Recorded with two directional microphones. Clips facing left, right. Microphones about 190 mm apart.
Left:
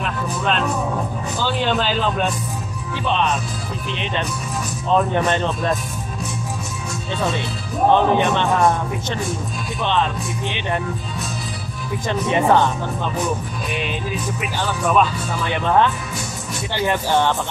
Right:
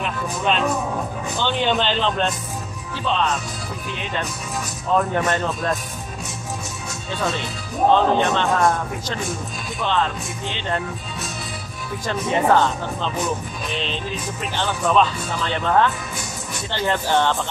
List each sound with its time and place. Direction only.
0.0 s speech: centre (ahead or behind)
3.1 s speech: 20° left (ahead or behind)
7.9 s speech: 15° left (ahead or behind)
9.8 s speech: 20° left (ahead or behind)
12.1 s speech: 15° left (ahead or behind)
14.4 s speech: 10° left (ahead or behind)